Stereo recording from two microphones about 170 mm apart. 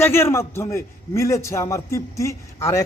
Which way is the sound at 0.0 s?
15° left (ahead or behind).